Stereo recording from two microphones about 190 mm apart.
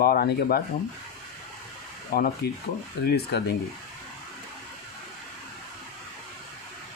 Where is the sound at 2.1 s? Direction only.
55° left (ahead or behind).